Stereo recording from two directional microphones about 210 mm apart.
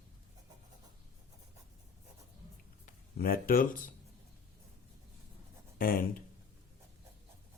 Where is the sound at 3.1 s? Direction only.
45° left (ahead or behind).